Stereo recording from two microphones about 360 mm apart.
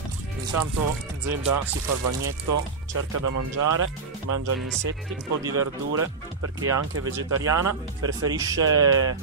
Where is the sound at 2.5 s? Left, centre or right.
Right.